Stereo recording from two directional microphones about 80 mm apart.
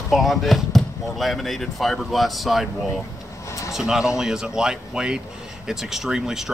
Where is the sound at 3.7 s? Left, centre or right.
Centre.